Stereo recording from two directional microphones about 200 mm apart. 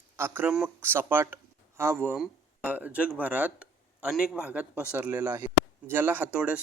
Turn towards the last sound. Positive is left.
turn(degrees=-5)  # may be behind; listen again after turning